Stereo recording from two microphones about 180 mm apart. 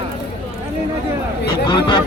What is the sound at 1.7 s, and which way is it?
Speech, 25° left (ahead or behind).